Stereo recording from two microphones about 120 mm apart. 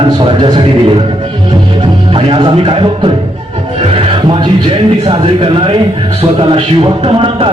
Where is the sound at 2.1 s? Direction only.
50° right (ahead or behind).